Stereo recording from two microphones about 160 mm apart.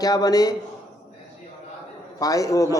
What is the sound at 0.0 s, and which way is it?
Speech, 25° left (ahead or behind).